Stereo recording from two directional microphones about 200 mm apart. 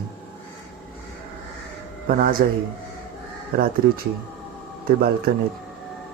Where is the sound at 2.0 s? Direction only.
45° right (ahead or behind).